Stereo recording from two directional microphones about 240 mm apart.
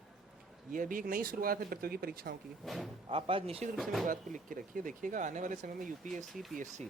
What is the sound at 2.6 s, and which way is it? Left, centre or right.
Speech, centre.